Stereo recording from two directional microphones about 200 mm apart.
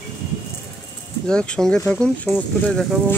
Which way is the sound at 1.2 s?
5° left (ahead or behind).